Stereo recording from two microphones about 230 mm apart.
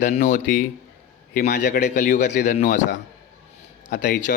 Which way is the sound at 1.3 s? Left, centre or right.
Left.